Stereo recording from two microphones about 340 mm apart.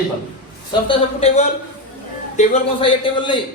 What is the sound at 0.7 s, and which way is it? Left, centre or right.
A man's voice, centre.